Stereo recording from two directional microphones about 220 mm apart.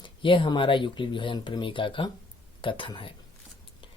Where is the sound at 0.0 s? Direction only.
20° left (ahead or behind).